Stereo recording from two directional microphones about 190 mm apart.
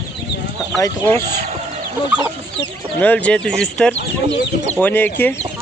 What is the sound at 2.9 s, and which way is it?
Speech, 10° left (ahead or behind).